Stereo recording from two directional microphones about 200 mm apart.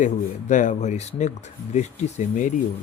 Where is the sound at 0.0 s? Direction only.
40° left (ahead or behind).